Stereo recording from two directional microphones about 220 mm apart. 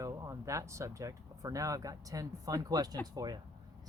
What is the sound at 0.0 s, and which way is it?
Speech, 15° right (ahead or behind).